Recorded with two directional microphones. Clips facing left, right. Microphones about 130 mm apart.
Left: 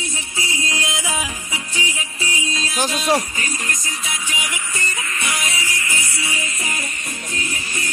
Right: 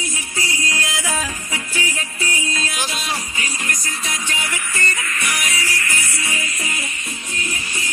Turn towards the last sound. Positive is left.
turn(degrees=35)  # may be behind; listen again after turning